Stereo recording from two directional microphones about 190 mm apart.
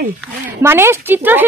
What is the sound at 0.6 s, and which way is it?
Speech, 15° right (ahead or behind).